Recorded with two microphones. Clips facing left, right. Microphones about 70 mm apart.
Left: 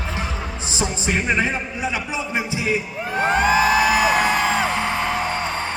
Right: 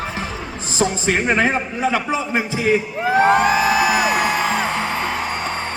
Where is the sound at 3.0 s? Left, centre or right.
Right.